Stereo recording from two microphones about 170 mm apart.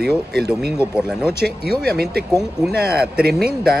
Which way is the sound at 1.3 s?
65° right (ahead or behind).